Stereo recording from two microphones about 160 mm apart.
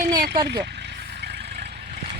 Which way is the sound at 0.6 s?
90° right.